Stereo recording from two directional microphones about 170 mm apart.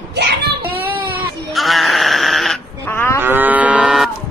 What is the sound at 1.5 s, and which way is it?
Goat, centre (ahead or behind).